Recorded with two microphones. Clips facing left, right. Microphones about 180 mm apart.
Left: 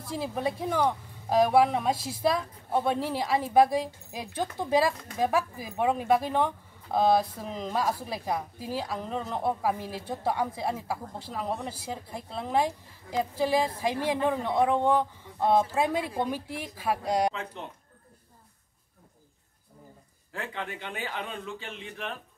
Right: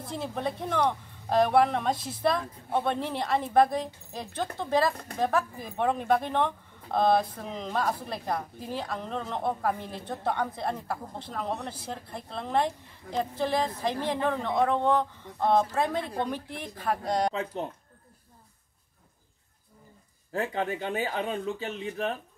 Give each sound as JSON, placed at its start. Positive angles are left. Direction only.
{"t": 0.1, "sound": "a woman's voice", "side_deg": 5}
{"t": 17.3, "sound": "speech", "side_deg": -35}
{"t": 20.3, "sound": "speech", "side_deg": -40}